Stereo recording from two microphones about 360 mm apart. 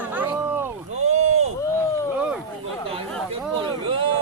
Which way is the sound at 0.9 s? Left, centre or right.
Centre.